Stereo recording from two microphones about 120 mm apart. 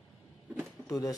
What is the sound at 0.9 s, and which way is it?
Speech, 30° left (ahead or behind).